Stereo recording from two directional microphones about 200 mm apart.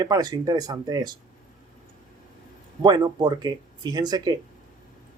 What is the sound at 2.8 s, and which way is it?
Speech, 20° right (ahead or behind).